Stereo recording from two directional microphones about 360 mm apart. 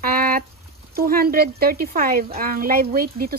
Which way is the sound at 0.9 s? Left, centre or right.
Right.